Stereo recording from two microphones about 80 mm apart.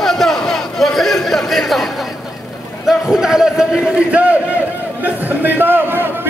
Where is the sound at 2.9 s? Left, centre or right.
Centre.